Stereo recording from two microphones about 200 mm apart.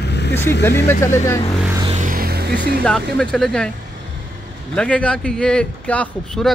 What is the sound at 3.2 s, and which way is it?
Speech, 5° left (ahead or behind).